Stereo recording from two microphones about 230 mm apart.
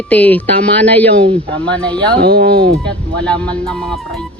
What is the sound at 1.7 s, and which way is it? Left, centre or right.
Speech, centre.